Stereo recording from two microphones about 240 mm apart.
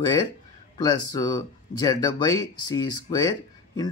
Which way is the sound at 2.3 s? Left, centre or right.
Centre.